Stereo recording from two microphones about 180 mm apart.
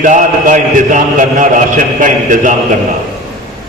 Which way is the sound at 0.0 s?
45° right (ahead or behind).